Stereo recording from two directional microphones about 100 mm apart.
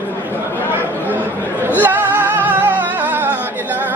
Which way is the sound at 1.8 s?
20° right (ahead or behind).